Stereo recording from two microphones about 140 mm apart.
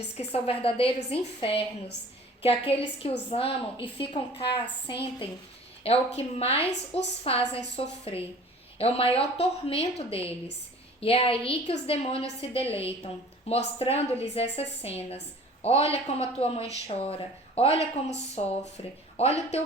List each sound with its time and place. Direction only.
0.2 s a woman's voice: 45° left (ahead or behind)